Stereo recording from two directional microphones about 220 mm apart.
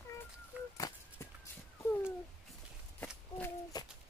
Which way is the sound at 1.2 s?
10° left (ahead or behind).